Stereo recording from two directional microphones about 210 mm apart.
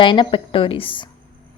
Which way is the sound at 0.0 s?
20° left (ahead or behind).